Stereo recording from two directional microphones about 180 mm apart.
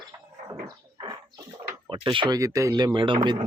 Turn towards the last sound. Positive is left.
turn(degrees=-25)  # may be behind; listen again after turning